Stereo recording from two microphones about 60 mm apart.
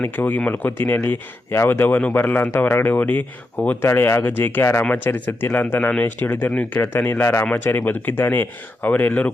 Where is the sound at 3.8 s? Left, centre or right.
Left.